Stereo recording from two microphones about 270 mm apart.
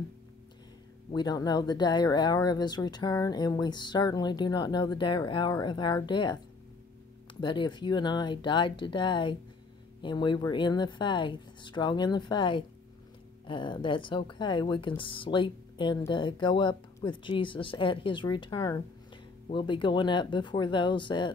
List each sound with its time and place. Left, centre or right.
1.1 s speech: centre